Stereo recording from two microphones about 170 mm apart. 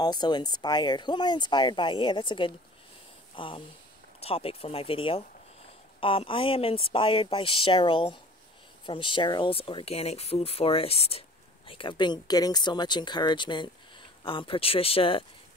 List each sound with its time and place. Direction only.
0.0 s speech: 25° left (ahead or behind)